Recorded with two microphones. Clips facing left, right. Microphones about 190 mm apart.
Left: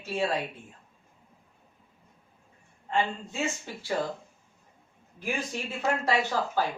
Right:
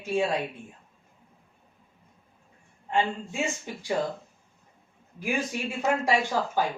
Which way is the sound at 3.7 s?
15° right (ahead or behind).